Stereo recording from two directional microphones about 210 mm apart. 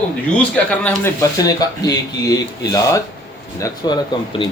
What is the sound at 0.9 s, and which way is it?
Speech, 15° left (ahead or behind).